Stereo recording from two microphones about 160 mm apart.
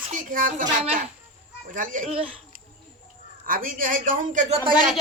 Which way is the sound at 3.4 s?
60° right (ahead or behind).